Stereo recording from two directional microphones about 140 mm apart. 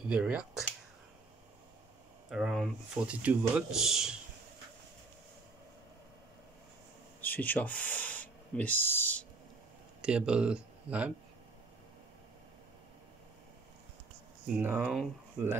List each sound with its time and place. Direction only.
0.1 s speech: 10° right (ahead or behind)
2.2 s speech: 5° right (ahead or behind)
7.2 s speech: 10° left (ahead or behind)
10.0 s speech: 5° right (ahead or behind)
14.5 s speech: 10° right (ahead or behind)